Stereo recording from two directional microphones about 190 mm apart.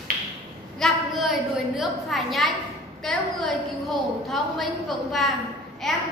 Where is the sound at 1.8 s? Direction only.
Centre (ahead or behind).